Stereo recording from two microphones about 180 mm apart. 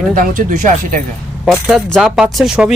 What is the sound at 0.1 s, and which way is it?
Speech, 50° right (ahead or behind).